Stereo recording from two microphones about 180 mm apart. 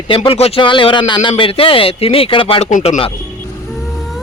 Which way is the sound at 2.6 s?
45° left (ahead or behind).